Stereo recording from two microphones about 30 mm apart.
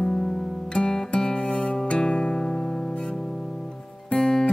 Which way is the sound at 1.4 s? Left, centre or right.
Left.